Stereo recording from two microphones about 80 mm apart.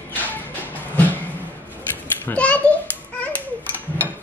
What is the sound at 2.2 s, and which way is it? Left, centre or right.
Speech, centre.